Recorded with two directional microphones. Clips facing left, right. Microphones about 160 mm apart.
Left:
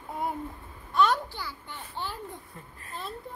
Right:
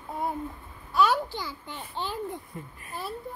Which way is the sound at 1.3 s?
15° right (ahead or behind).